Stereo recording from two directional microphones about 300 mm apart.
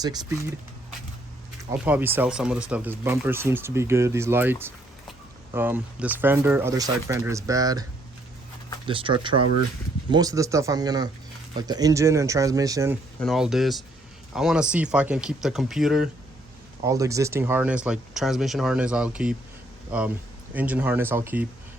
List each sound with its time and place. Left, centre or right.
0.0 s speech: centre
1.8 s speech: centre
8.9 s speech: centre
13.1 s speech: centre